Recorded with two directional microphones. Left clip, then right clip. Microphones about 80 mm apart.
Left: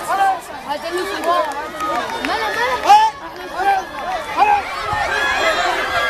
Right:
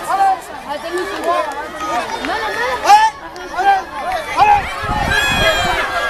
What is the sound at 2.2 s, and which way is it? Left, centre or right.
Chatter, left.